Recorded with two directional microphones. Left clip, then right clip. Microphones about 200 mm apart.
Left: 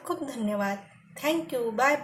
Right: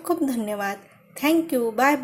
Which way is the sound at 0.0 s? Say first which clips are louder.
Right 7 dB; 40° right (ahead or behind).